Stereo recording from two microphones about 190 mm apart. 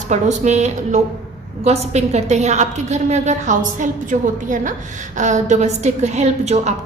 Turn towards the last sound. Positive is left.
turn(degrees=-35)  # may be behind; listen again after turning